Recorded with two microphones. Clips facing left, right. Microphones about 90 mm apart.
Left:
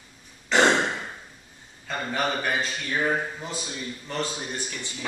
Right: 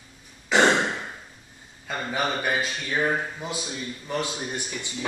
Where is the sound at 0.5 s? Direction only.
5° right (ahead or behind).